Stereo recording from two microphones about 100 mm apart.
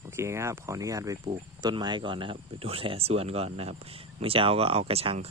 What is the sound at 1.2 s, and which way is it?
Speech, 50° right (ahead or behind).